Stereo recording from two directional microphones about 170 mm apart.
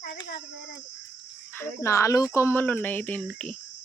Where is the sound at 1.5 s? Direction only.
15° left (ahead or behind).